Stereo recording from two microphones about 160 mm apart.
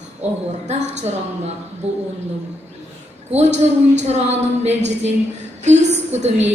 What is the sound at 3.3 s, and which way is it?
A woman's voice, 45° right (ahead or behind).